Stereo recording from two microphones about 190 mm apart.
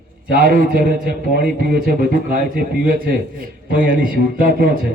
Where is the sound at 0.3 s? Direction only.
50° right (ahead or behind).